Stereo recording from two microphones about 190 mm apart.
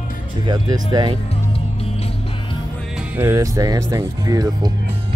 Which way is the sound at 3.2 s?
15° right (ahead or behind).